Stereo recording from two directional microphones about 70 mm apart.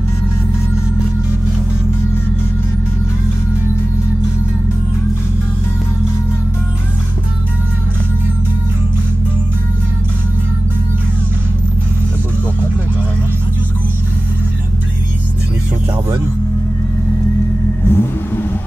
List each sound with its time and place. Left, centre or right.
17.8 s vehicle: left